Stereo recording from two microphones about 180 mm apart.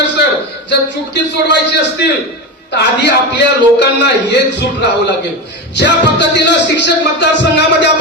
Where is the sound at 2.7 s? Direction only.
75° left (ahead or behind).